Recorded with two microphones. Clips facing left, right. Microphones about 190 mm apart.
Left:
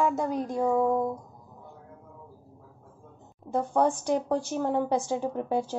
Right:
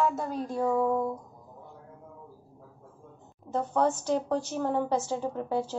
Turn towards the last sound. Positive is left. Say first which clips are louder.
# left 2 dB
turn(degrees=15)  # may be behind; listen again after turning